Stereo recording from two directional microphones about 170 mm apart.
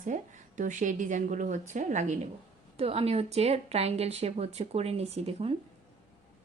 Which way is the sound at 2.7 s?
35° right (ahead or behind).